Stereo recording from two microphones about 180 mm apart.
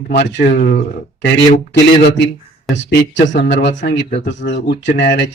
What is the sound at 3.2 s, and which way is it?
Speech, 45° left (ahead or behind).